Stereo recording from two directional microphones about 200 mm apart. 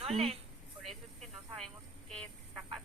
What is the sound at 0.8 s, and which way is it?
Snake, centre (ahead or behind).